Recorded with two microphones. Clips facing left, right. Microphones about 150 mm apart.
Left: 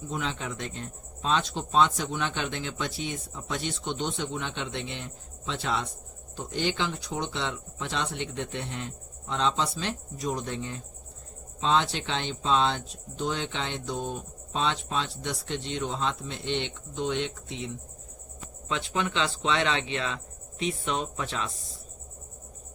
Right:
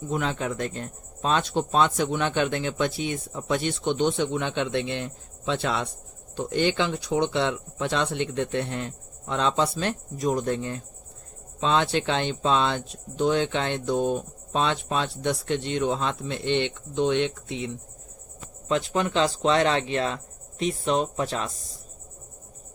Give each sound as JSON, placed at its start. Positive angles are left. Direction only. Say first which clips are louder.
{"t": 0.1, "sound": "speech", "louder": "right 6 dB", "side_deg": -55}
{"t": 18.7, "sound": "speech", "louder": "right 6 dB", "side_deg": -40}